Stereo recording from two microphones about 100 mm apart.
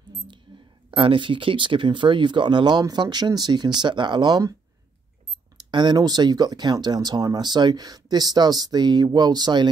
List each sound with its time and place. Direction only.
0.8 s speech: 60° right (ahead or behind); by 4.6 s 40° right (ahead or behind)
5.7 s speech: 50° right (ahead or behind)